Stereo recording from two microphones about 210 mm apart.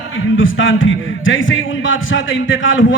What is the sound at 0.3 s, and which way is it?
A man's voice, 65° left (ahead or behind).